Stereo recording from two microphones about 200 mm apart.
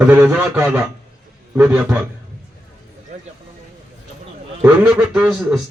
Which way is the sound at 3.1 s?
35° right (ahead or behind).